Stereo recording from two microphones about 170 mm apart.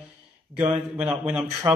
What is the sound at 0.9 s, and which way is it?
Speech, 10° right (ahead or behind).